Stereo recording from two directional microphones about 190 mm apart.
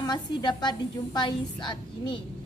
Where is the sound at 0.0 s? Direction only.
25° left (ahead or behind).